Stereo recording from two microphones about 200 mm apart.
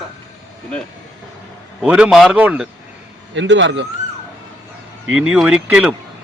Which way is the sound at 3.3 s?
65° right (ahead or behind).